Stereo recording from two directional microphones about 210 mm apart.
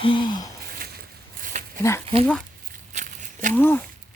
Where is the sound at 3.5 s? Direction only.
10° left (ahead or behind).